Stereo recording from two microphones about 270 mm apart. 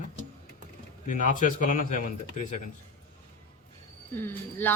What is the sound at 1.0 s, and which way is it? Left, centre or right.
A man's voice, left.